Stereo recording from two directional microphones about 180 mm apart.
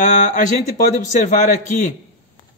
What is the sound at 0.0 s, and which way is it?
A man's voice, 45° left (ahead or behind).